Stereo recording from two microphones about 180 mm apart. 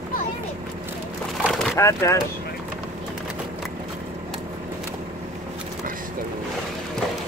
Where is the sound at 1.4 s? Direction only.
Centre (ahead or behind).